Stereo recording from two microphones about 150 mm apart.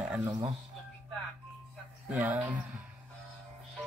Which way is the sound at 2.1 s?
10° right (ahead or behind).